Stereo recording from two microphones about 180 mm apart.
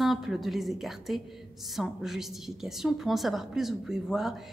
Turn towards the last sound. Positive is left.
turn(degrees=0)  # may be behind; listen again after turning